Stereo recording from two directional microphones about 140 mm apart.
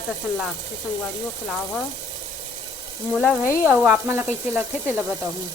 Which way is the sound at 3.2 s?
20° left (ahead or behind).